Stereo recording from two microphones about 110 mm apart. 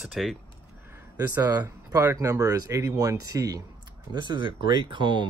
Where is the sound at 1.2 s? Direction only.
35° right (ahead or behind).